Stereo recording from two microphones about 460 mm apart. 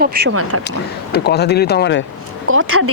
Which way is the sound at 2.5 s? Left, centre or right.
Right.